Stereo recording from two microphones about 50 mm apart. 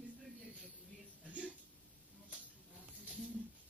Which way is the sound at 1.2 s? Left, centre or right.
Right.